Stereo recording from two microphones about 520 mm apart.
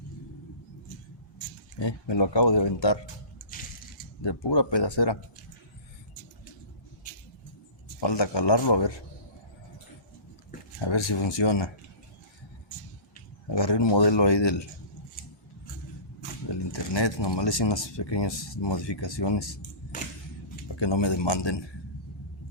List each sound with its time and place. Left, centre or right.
1.8 s speech: left
4.2 s speech: left
8.0 s speech: left
10.8 s speech: left
13.5 s speech: left
16.7 s speech: left
19.9 s camera: centre
20.7 s speech: left